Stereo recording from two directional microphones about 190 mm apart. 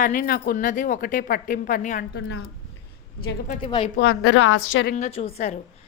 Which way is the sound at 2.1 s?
60° left (ahead or behind).